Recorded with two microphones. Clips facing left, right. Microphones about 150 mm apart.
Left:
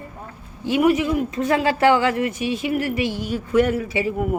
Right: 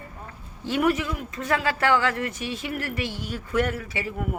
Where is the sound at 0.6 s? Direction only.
10° left (ahead or behind).